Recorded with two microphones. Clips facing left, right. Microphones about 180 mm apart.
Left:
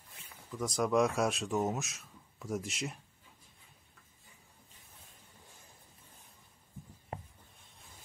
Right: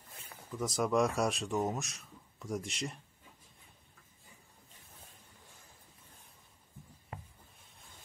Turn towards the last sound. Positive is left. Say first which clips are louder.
# left 4 dB
turn(degrees=30)  # may be behind; listen again after turning